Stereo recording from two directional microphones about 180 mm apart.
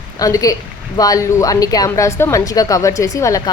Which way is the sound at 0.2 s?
20° left (ahead or behind).